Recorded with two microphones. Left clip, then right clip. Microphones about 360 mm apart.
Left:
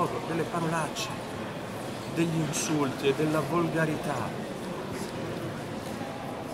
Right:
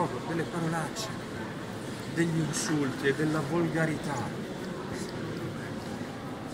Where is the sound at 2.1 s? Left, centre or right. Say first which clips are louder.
Left 1 dB; centre.